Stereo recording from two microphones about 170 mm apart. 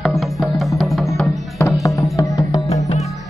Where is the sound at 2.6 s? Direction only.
40° left (ahead or behind).